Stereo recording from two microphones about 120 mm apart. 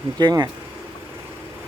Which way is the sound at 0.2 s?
30° right (ahead or behind).